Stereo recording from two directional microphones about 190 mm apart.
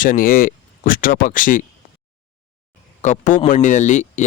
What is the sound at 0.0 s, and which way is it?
Speech, 45° left (ahead or behind).